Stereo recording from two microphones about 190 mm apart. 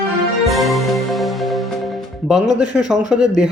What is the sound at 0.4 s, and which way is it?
Music, centre (ahead or behind).